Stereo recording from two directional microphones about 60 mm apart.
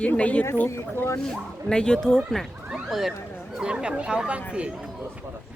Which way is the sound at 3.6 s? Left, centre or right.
Centre.